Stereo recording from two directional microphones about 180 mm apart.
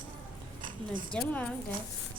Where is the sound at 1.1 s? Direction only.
5° left (ahead or behind).